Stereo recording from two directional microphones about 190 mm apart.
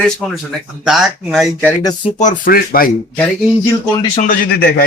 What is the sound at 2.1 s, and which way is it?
Speech, 45° left (ahead or behind).